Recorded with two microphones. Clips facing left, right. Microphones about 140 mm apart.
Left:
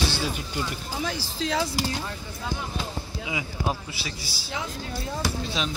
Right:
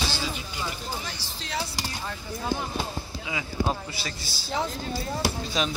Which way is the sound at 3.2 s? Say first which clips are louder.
Right 1 dB; 15° left (ahead or behind).